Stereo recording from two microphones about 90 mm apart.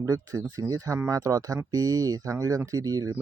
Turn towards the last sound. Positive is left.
turn(degrees=-45)  # may be behind; listen again after turning